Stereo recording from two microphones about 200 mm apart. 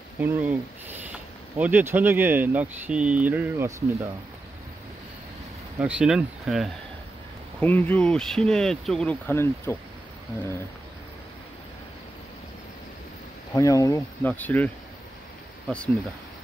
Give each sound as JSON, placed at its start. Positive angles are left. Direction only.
{"t": 0.2, "sound": "speech", "side_deg": -10}
{"t": 5.8, "sound": "speech", "side_deg": -5}
{"t": 13.5, "sound": "speech", "side_deg": 15}